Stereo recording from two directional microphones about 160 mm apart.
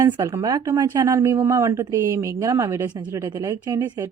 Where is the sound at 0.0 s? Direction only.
20° right (ahead or behind).